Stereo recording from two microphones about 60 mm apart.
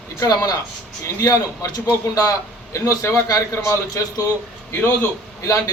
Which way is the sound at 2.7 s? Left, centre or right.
Left.